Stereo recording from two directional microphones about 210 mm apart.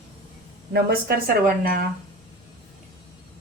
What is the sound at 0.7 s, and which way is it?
Speech, 45° right (ahead or behind).